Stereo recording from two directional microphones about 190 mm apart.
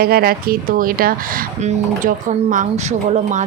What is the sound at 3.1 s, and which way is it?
Speech, 40° right (ahead or behind).